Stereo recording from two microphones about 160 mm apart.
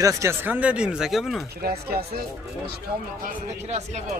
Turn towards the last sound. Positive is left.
turn(degrees=-45)  # may be behind; listen again after turning